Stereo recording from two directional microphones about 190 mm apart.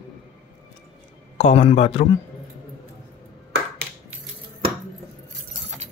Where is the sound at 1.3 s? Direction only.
35° left (ahead or behind).